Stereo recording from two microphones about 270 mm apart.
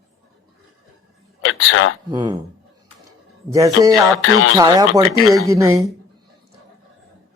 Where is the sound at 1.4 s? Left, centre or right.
Left.